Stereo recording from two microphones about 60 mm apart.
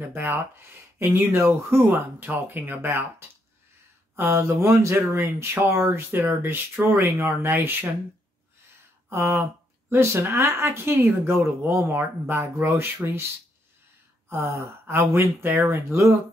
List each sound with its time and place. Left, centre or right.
0.0 s speech: right
7.0 s speech: right
9.1 s speech: right
14.3 s speech: right